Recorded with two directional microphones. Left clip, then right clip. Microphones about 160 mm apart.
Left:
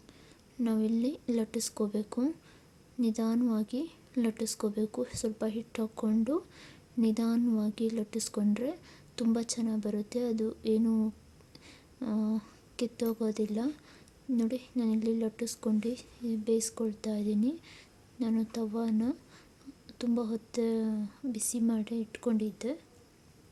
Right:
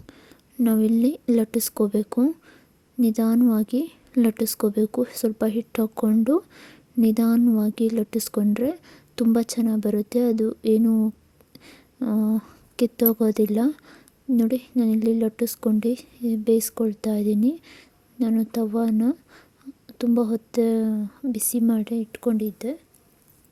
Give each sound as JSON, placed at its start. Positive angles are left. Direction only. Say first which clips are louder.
{"t": 0.0, "sound": "a woman's voice", "louder": "right 8 dB", "side_deg": -45}